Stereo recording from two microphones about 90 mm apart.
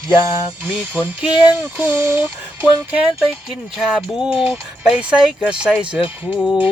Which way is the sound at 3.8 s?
5° right (ahead or behind).